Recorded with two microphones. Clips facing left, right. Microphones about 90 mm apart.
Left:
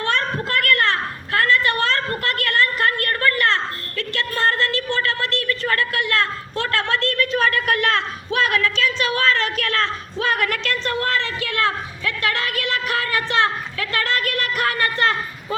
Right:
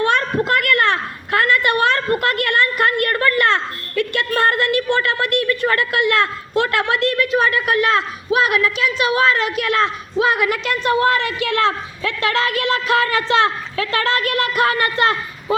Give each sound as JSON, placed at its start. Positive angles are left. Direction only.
{"t": 0.0, "sound": "a woman's voice", "side_deg": -20}